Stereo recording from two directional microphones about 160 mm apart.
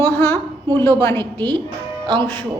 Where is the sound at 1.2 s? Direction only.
30° right (ahead or behind).